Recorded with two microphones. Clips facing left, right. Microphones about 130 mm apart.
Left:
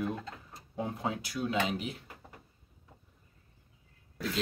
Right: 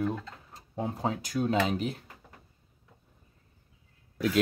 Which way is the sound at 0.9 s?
40° right (ahead or behind).